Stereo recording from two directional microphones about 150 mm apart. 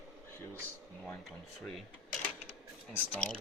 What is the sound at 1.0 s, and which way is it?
Speech, 5° left (ahead or behind).